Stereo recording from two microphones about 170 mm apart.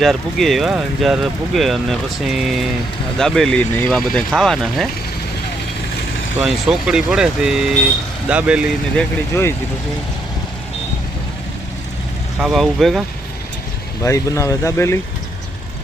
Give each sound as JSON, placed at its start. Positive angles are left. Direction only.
{"t": 0.0, "sound": "speech", "side_deg": 0}
{"t": 6.4, "sound": "speech", "side_deg": -5}
{"t": 9.0, "sound": "speech", "side_deg": 15}
{"t": 12.4, "sound": "speech", "side_deg": 0}
{"t": 14.0, "sound": "speech", "side_deg": 15}